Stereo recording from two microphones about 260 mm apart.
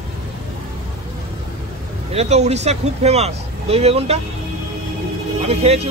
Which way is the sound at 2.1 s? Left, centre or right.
Right.